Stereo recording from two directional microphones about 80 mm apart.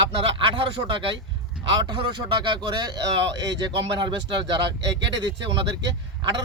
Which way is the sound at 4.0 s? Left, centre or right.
Right.